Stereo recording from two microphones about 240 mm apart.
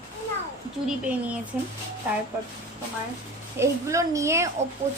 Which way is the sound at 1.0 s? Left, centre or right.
Centre.